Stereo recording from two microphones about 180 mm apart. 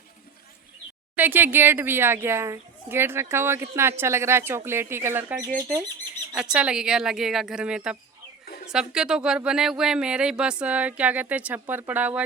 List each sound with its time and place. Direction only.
1.1 s speech: 10° right (ahead or behind)